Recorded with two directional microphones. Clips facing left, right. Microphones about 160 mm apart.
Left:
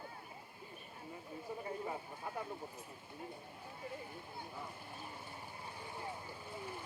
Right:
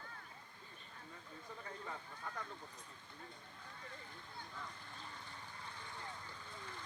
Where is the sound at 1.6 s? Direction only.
20° left (ahead or behind).